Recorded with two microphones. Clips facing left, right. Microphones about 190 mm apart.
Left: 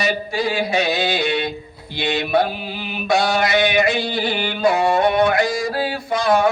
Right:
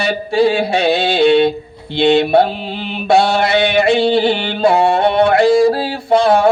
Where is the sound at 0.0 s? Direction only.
30° right (ahead or behind).